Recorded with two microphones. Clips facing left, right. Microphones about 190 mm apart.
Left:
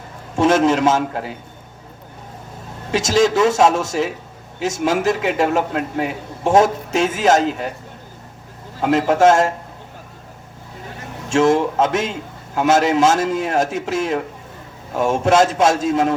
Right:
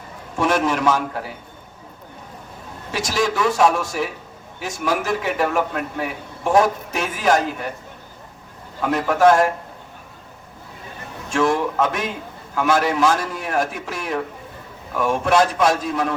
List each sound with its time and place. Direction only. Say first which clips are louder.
0.3 s a man's voice: left 5 dB; 25° left (ahead or behind)
2.9 s a man's voice: left 6 dB; 25° left (ahead or behind)
8.8 s a man's voice: left 2 dB; 25° left (ahead or behind)
11.3 s a man's voice: left 4 dB; 25° left (ahead or behind)